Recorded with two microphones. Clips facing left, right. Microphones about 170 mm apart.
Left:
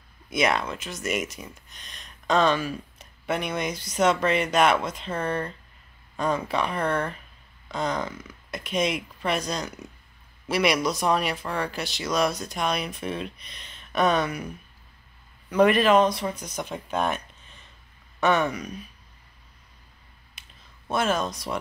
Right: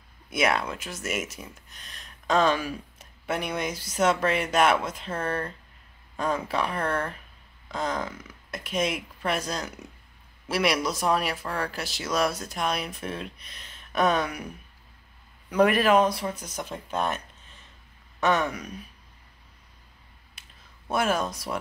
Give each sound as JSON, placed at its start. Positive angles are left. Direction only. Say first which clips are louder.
{"t": 0.3, "sound": "speech", "louder": "left 1 dB", "side_deg": -5}
{"t": 15.5, "sound": "speech", "louder": "left 2 dB", "side_deg": -5}
{"t": 18.2, "sound": "speech", "louder": "left 2 dB", "side_deg": 5}
{"t": 20.4, "sound": "a sound", "louder": "left 1 dB", "side_deg": -5}
{"t": 20.9, "sound": "speech", "louder": "left 1 dB", "side_deg": -10}